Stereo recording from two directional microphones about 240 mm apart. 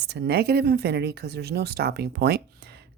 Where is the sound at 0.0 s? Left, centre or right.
Right.